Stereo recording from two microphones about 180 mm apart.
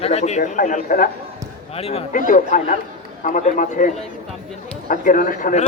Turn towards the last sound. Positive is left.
turn(degrees=45)  # may be behind; listen again after turning